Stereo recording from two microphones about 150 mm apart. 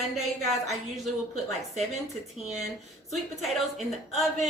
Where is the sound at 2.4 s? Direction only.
50° right (ahead or behind).